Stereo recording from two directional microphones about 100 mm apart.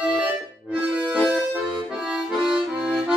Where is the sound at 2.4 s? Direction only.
10° right (ahead or behind).